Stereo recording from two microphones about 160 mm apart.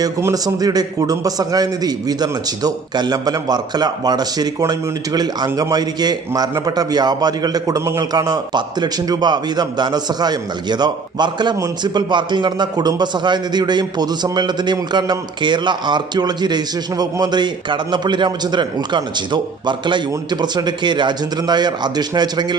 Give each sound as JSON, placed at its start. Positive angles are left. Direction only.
{"t": 0.0, "sound": "a man's voice", "side_deg": -20}